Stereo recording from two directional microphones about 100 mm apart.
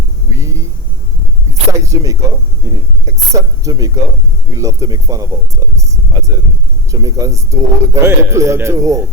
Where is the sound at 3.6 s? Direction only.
35° right (ahead or behind).